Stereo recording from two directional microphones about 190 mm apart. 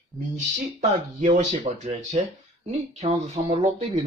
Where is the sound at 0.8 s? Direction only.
40° right (ahead or behind).